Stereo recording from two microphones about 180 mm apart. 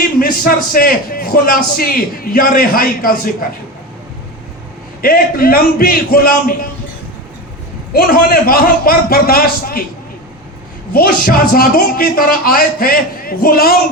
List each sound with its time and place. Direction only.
0.2 s a man's voice: 55° left (ahead or behind)
5.0 s a man's voice: 55° left (ahead or behind)
7.9 s a man's voice: 55° left (ahead or behind)
10.9 s a man's voice: 55° left (ahead or behind)